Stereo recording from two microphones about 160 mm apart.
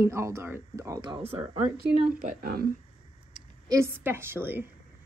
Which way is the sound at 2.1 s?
65° right (ahead or behind).